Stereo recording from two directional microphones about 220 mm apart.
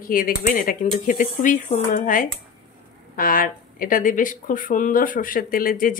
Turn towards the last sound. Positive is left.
turn(degrees=40)  # may be behind; listen again after turning